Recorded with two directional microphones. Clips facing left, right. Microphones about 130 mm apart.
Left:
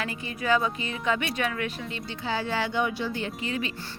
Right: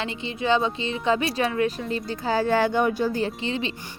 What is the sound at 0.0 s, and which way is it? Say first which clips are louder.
Speech: right 4 dB; 25° right (ahead or behind).